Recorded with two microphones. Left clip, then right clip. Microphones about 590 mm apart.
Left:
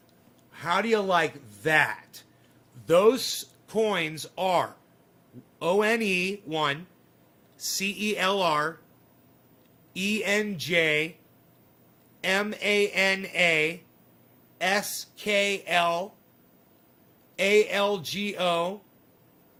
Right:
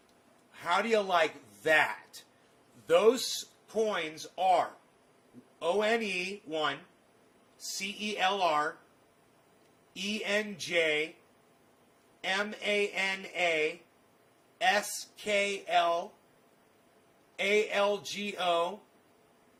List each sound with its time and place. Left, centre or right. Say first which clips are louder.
0.5 s a man's voice: left 3 dB; centre
7.9 s speech: left 3 dB; centre
9.9 s speech: left 6 dB; centre
12.2 s speech: left 6 dB; centre
17.3 s speech: left 6 dB; centre